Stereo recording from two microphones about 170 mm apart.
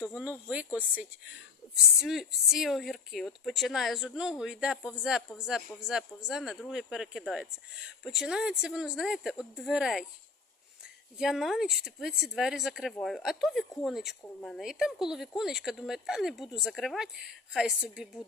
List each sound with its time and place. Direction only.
0.0 s speech: 5° right (ahead or behind)
11.2 s speech: centre (ahead or behind)